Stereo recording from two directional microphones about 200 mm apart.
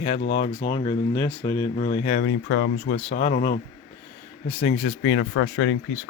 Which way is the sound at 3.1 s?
30° left (ahead or behind).